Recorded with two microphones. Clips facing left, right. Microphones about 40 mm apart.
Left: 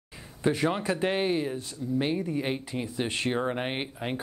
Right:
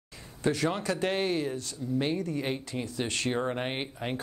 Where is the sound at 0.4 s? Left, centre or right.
Centre.